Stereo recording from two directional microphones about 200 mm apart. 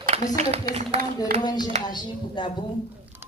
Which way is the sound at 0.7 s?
30° right (ahead or behind).